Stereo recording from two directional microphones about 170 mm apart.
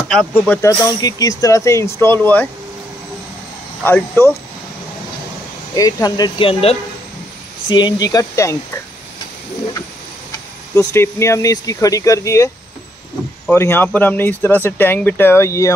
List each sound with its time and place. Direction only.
0.1 s speech: 5° left (ahead or behind)
0.6 s speech: 20° left (ahead or behind)
3.8 s speech: 10° left (ahead or behind)
5.8 s speech: 20° left (ahead or behind)
10.7 s speech: 15° left (ahead or behind)
13.5 s speech: 15° left (ahead or behind)